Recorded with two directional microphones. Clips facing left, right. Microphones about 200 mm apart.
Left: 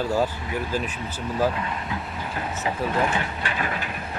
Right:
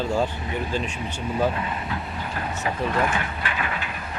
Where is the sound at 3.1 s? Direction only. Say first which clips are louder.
Left 1 dB; 30° left (ahead or behind).